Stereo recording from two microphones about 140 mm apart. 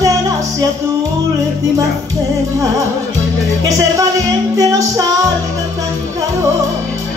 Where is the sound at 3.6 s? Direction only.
20° right (ahead or behind).